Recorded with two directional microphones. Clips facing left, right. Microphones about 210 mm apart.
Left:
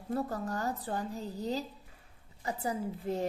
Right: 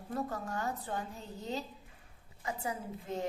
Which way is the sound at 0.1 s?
35° left (ahead or behind).